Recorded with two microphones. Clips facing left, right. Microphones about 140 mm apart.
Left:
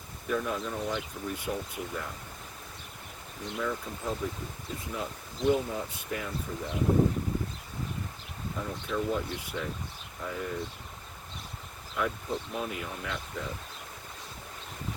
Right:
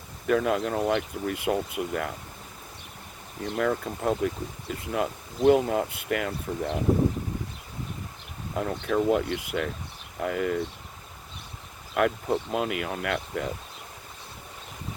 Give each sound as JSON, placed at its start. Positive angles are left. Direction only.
{"t": 0.3, "sound": "speech", "side_deg": -85}
{"t": 3.6, "sound": "speech", "side_deg": -75}
{"t": 8.5, "sound": "speech", "side_deg": -70}
{"t": 11.9, "sound": "speech", "side_deg": -75}